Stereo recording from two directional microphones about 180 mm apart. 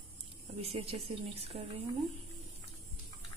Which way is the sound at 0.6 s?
35° right (ahead or behind).